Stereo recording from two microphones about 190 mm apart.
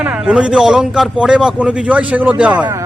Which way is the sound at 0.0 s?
5° right (ahead or behind).